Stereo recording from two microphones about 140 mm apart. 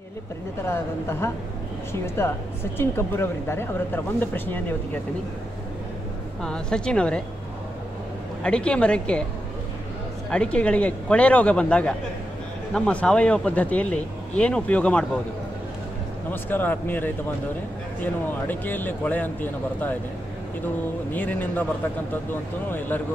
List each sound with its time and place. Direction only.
0.7 s speech: 15° left (ahead or behind)
6.4 s speech: 5° left (ahead or behind)
8.4 s speech: 5° left (ahead or behind)
10.3 s speech: 10° left (ahead or behind)
16.3 s speech: 15° left (ahead or behind)
21.1 s speech: 10° left (ahead or behind)